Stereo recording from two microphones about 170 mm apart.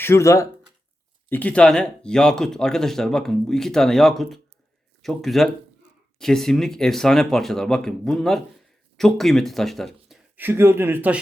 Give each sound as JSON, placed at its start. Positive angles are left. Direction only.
{"t": 0.0, "sound": "speech", "side_deg": 15}
{"t": 10.3, "sound": "speech", "side_deg": -10}